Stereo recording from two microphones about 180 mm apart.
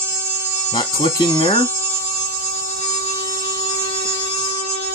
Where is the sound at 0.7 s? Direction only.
30° left (ahead or behind).